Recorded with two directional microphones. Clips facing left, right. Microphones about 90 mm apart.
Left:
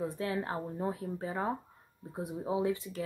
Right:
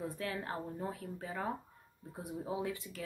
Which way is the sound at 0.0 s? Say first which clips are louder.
Left 5 dB; 25° left (ahead or behind).